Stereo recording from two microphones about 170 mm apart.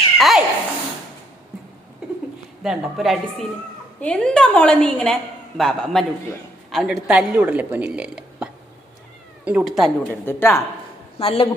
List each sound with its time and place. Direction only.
0.2 s speech: centre (ahead or behind)
2.6 s a woman's voice: centre (ahead or behind)
10.1 s speech: 15° left (ahead or behind)
11.2 s speech: 35° left (ahead or behind)